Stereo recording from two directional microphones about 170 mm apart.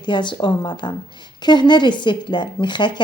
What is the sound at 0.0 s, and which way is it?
A woman's voice, 25° left (ahead or behind).